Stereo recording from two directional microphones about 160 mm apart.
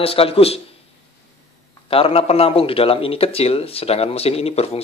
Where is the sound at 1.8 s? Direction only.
35° left (ahead or behind).